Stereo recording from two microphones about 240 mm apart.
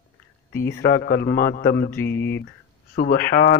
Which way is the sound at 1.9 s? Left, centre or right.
Centre.